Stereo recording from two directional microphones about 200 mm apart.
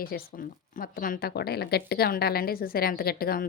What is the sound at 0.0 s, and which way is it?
A woman's voice, 50° left (ahead or behind).